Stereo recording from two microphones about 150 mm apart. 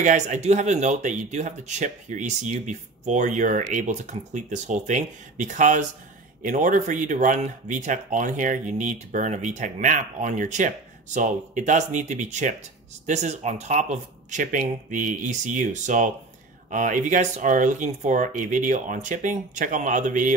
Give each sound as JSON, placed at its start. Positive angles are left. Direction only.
{"t": 0.0, "sound": "speech", "side_deg": -55}